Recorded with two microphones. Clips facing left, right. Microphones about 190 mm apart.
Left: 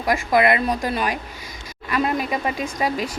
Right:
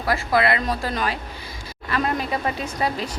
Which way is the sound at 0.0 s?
15° left (ahead or behind).